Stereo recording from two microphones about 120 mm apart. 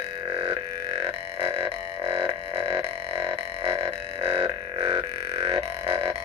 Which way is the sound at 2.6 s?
50° right (ahead or behind).